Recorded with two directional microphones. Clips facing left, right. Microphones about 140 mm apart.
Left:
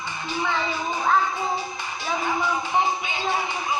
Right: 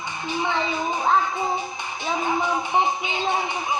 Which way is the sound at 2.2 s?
20° right (ahead or behind).